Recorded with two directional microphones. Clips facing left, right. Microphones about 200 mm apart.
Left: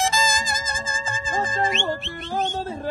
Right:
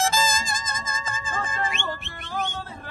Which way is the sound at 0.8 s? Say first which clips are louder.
Left 3 dB; 30° left (ahead or behind).